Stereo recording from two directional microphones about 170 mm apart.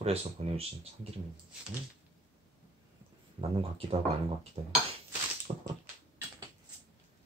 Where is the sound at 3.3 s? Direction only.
35° right (ahead or behind).